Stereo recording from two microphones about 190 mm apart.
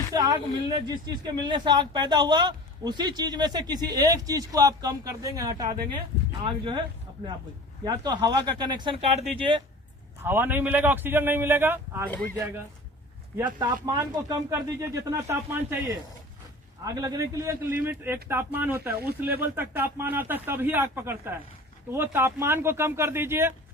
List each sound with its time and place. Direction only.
0.1 s speech: 20° right (ahead or behind)
7.9 s speech: 20° right (ahead or behind)
10.2 s speech: 10° right (ahead or behind)
13.4 s speech: 25° right (ahead or behind)